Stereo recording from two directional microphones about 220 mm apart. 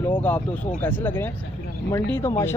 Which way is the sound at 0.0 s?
10° left (ahead or behind).